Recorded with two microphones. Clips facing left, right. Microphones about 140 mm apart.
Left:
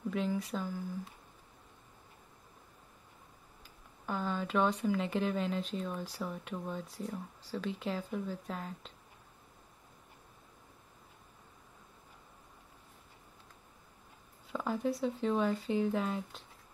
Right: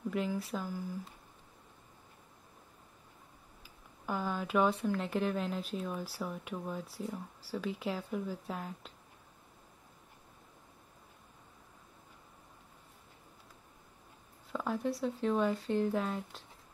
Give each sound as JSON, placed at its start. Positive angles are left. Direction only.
{"t": 0.1, "sound": "speech", "side_deg": -5}
{"t": 3.6, "sound": "speech", "side_deg": -5}
{"t": 14.5, "sound": "speech", "side_deg": 0}